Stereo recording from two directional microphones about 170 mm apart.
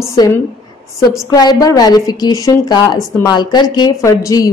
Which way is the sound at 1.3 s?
20° left (ahead or behind).